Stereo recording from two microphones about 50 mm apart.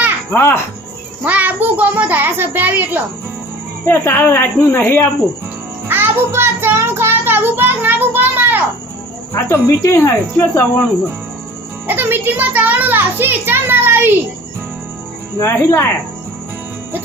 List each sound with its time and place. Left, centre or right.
0.3 s a woman's voice: left
1.2 s a child's voice: right
3.8 s a woman's voice: left
5.9 s music: right
8.1 s a sound: right
9.3 s speech: left
10.1 s a woman's voice: left
11.9 s a child's voice: right
15.4 s speech: left